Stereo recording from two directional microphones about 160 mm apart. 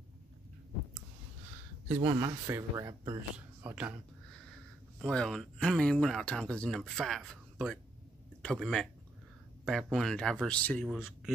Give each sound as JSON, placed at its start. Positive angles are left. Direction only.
{"t": 2.0, "sound": "speech", "side_deg": -30}
{"t": 3.3, "sound": "a man's voice", "side_deg": -10}
{"t": 4.9, "sound": "speech", "side_deg": 5}
{"t": 8.4, "sound": "speech", "side_deg": 5}